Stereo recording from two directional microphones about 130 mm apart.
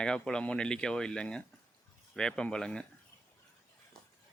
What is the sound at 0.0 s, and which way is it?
Speech, 5° left (ahead or behind).